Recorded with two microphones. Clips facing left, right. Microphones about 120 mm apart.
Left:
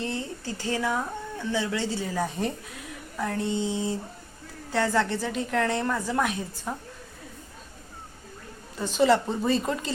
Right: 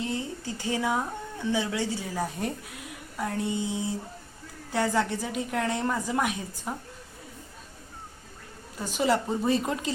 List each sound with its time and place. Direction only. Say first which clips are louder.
0.0 s a woman's voice: even; 15° right (ahead or behind)
8.8 s a woman's voice: left 4 dB; 10° right (ahead or behind)